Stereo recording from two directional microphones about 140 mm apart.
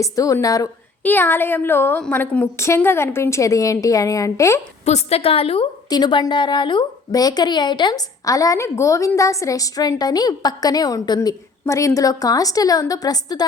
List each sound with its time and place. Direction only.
0.0 s a woman's voice: 25° left (ahead or behind)
1.0 s a woman's voice: 15° left (ahead or behind)
4.9 s a woman's voice: 50° left (ahead or behind)
5.9 s a woman's voice: 30° left (ahead or behind)